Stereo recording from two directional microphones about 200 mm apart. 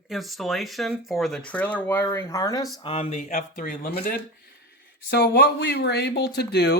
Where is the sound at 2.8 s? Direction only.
30° left (ahead or behind); by 3.9 s 45° left (ahead or behind).